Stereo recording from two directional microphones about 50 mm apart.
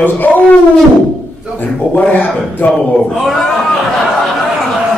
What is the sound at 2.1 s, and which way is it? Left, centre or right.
Speech, left.